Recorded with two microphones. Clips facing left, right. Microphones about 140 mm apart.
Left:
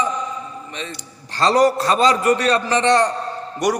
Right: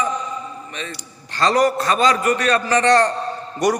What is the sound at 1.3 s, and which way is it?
A man's voice, 30° left (ahead or behind).